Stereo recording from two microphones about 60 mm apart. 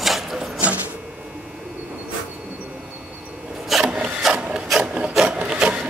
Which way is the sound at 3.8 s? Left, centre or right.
Centre.